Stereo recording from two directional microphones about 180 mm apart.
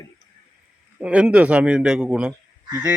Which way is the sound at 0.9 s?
5° right (ahead or behind).